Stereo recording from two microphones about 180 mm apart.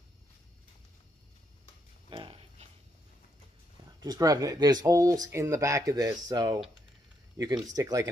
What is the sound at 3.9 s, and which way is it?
Speech, 20° right (ahead or behind).